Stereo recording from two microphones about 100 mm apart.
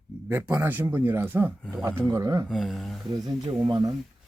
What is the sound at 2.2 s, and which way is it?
Speech, 35° right (ahead or behind).